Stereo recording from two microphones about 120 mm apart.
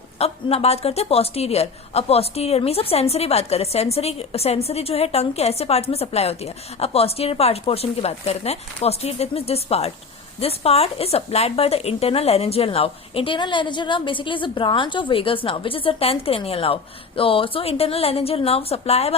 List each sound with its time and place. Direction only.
0.2 s a woman's voice: 55° left (ahead or behind)